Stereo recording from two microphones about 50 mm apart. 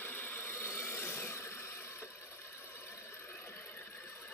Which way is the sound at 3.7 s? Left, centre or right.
Left.